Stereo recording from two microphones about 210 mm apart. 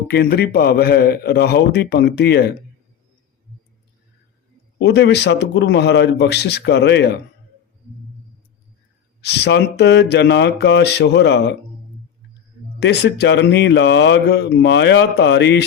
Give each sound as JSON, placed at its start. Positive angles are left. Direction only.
{"t": 0.1, "sound": "a man's voice", "side_deg": 50}
{"t": 4.8, "sound": "a man's voice", "side_deg": 55}
{"t": 9.2, "sound": "a man's voice", "side_deg": 50}
{"t": 12.8, "sound": "speech", "side_deg": 55}